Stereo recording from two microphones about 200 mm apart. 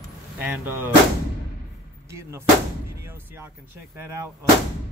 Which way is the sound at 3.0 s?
10° right (ahead or behind).